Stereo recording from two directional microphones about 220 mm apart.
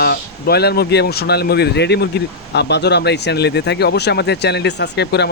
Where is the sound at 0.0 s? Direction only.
45° left (ahead or behind).